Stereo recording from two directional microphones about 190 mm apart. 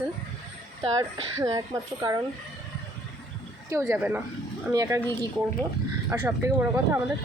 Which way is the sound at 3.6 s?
10° right (ahead or behind).